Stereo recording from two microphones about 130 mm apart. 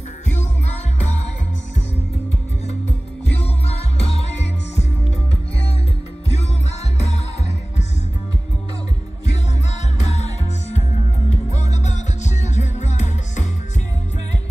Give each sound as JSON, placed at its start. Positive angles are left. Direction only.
{"t": 3.6, "sound": "music", "side_deg": 55}
{"t": 7.0, "sound": "music", "side_deg": 55}
{"t": 9.9, "sound": "music", "side_deg": 60}
{"t": 11.2, "sound": "music", "side_deg": 60}